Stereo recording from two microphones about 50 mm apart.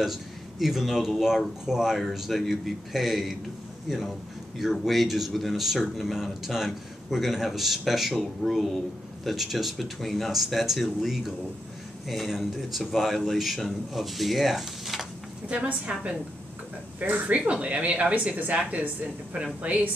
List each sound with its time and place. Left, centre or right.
0.0 s speech: centre
15.4 s speech: right
19.6 s speech: right